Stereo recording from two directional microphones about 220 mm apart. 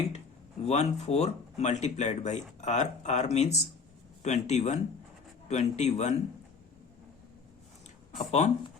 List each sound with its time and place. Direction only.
0.6 s speech: 30° left (ahead or behind)
8.3 s speech: 30° left (ahead or behind)